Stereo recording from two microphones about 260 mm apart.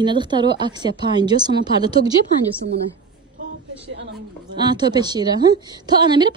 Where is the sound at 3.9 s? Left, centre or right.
Right.